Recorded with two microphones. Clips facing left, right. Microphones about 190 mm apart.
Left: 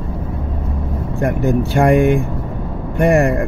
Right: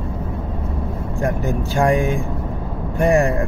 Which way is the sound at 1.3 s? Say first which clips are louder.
Left 7 dB; 60° left (ahead or behind).